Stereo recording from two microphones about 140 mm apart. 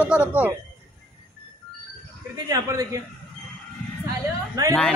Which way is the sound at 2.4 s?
25° right (ahead or behind).